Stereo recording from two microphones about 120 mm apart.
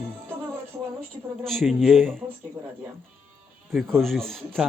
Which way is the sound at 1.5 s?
5° left (ahead or behind).